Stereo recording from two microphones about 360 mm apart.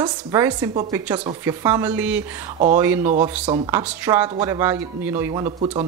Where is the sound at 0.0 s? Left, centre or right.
Centre.